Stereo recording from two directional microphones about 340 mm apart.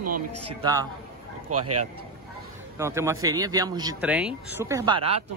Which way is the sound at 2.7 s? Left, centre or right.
Centre.